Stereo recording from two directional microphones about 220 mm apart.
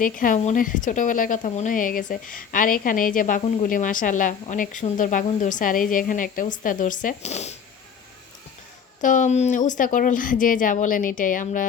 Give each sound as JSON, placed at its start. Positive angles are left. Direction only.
{"t": 0.0, "sound": "speech", "side_deg": 40}
{"t": 9.0, "sound": "speech", "side_deg": 35}